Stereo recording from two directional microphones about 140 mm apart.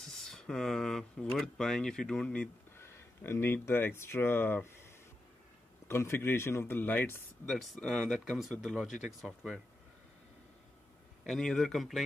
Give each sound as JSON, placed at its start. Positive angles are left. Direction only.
{"t": 0.0, "sound": "speech", "side_deg": 0}
{"t": 5.9, "sound": "a man's voice", "side_deg": 20}
{"t": 7.4, "sound": "speech", "side_deg": 0}
{"t": 11.2, "sound": "speech", "side_deg": 0}